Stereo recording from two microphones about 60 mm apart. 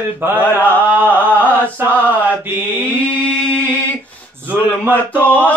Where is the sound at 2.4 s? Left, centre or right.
Right.